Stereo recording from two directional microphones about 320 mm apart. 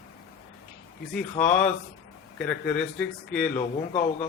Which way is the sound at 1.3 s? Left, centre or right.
Left.